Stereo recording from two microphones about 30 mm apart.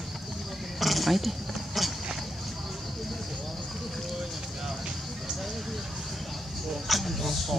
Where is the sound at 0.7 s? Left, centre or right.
Centre.